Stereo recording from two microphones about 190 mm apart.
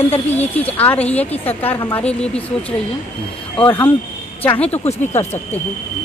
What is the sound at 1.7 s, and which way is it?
Speech, 20° left (ahead or behind).